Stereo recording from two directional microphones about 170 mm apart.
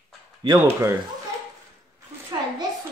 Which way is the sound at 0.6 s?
15° right (ahead or behind).